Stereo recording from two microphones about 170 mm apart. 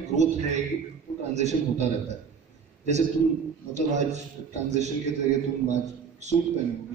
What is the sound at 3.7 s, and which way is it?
A man's voice, 40° right (ahead or behind).